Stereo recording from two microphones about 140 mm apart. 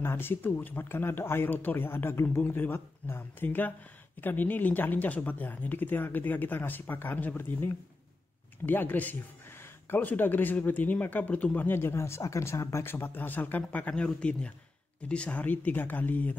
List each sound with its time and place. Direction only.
0.0 s speech: 15° left (ahead or behind)